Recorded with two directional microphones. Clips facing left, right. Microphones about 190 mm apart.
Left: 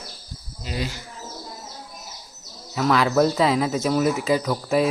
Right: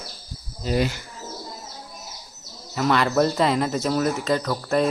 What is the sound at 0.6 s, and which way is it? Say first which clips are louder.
Speech: right 7 dB; 55° right (ahead or behind).